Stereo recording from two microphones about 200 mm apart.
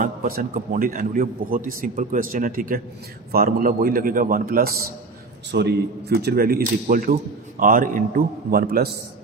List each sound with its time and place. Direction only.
0.0 s speech: 45° right (ahead or behind)